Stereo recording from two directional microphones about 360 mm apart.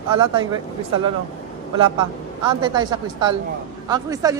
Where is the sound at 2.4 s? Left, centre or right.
Centre.